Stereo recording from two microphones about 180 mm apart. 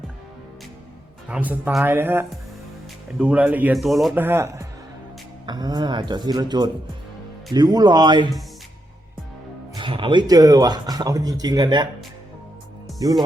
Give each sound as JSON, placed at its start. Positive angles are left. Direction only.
{"t": 1.3, "sound": "speech", "side_deg": -10}
{"t": 4.1, "sound": "speech", "side_deg": -10}
{"t": 9.7, "sound": "speech", "side_deg": -25}
{"t": 12.9, "sound": "music", "side_deg": 0}